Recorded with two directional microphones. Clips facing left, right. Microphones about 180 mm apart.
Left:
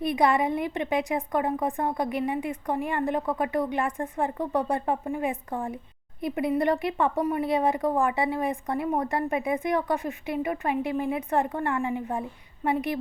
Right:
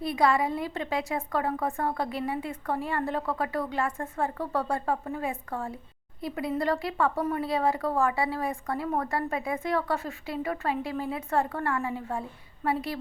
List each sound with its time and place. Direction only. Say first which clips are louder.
0.0 s speech: left 2 dB; 20° left (ahead or behind)